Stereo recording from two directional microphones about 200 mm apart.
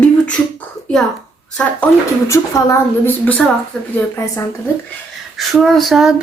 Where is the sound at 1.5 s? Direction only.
5° left (ahead or behind).